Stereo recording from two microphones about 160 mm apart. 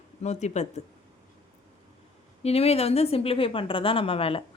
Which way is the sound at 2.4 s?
40° left (ahead or behind).